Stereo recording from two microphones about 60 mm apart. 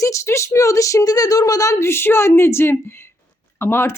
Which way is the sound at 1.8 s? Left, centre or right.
Left.